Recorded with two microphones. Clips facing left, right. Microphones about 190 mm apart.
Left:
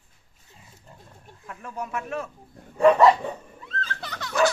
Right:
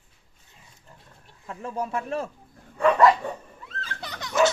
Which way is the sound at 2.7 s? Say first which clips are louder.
Left 2 dB; 30° left (ahead or behind).